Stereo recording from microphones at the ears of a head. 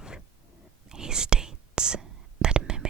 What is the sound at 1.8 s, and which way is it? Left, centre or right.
Whispering, right.